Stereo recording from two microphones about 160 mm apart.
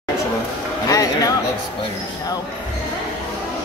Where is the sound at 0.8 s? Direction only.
20° left (ahead or behind).